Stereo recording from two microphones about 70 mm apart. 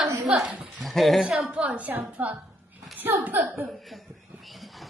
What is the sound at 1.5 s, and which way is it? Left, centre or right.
Speech, centre.